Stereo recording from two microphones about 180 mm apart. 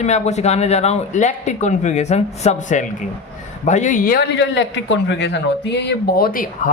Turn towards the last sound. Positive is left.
turn(degrees=50)  # may be behind; listen again after turning